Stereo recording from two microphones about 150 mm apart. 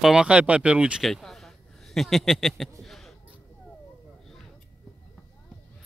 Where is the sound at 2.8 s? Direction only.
Centre (ahead or behind).